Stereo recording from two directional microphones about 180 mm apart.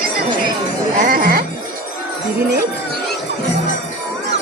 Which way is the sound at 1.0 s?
55° right (ahead or behind).